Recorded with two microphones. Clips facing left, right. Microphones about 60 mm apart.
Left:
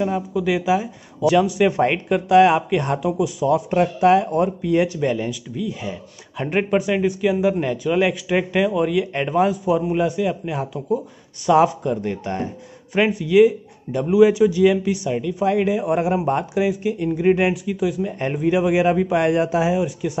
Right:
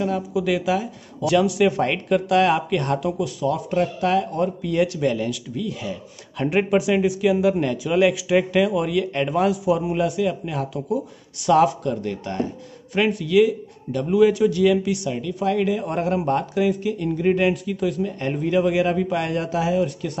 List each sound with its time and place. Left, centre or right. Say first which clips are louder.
0.3 s speech: left 2 dB; centre
3.7 s a man's voice: left 5 dB; left; by 9.0 s centre
9.0 s speech: even; centre
9.3 s speech: left 2 dB; centre
10.9 s speech: left 2 dB; centre
11.5 s a man's voice: left 1 dB; centre
14.1 s a man's voice: left 3 dB; centre